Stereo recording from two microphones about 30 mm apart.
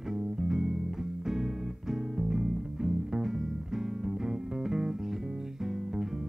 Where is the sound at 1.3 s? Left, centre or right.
Centre.